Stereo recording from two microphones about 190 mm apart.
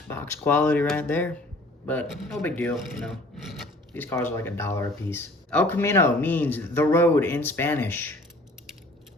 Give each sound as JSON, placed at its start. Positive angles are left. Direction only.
{"t": 0.1, "sound": "speech", "side_deg": 10}
{"t": 3.9, "sound": "speech", "side_deg": 10}